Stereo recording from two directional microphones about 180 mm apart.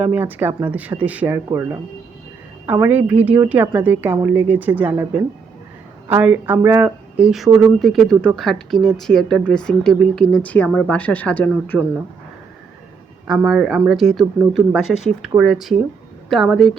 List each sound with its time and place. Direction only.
0.0 s speech: 10° right (ahead or behind); by 11.8 s 10° left (ahead or behind)
13.2 s speech: 5° right (ahead or behind)